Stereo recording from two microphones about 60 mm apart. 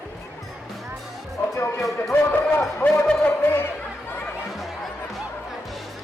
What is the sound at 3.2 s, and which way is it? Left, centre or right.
Music, left.